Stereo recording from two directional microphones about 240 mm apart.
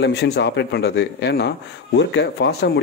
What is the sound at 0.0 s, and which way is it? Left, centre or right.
Speech, left.